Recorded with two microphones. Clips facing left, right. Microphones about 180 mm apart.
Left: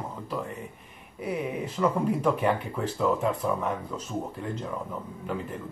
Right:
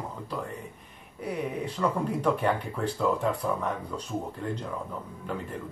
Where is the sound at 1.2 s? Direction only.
5° left (ahead or behind).